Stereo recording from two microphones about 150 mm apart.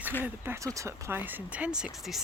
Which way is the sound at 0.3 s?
15° right (ahead or behind).